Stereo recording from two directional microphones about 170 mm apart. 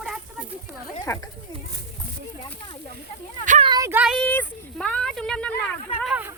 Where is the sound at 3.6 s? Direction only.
25° right (ahead or behind).